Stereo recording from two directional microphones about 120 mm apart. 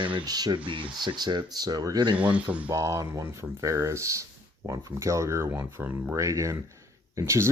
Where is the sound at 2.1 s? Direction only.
10° right (ahead or behind).